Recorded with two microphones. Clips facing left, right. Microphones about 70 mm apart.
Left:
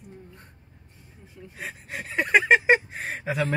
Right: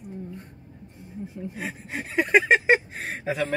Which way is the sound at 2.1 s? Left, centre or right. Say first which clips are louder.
Even; centre.